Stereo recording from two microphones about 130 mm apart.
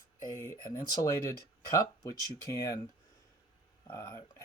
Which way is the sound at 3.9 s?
25° left (ahead or behind).